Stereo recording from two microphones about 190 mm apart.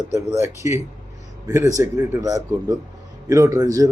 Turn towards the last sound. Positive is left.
turn(degrees=-20)  # may be behind; listen again after turning